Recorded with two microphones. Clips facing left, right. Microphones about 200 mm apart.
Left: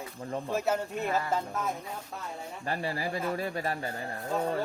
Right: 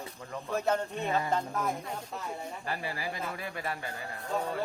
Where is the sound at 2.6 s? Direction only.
40° left (ahead or behind).